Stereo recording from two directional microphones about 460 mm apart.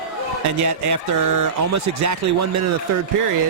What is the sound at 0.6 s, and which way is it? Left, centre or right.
Speech, right.